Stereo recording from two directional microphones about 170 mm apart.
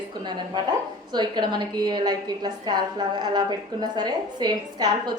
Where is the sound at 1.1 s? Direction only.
25° right (ahead or behind).